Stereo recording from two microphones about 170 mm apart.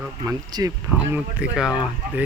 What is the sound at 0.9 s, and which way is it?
Speech, 5° right (ahead or behind).